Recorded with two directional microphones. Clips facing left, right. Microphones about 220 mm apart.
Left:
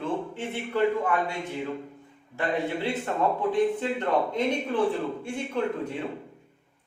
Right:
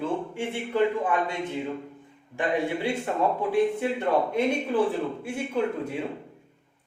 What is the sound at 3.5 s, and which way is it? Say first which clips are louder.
A man's voice: right 1 dB; 10° right (ahead or behind).